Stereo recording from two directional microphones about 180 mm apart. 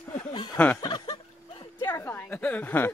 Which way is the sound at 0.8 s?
25° left (ahead or behind).